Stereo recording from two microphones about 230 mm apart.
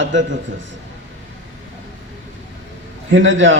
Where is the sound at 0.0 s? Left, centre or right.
Right.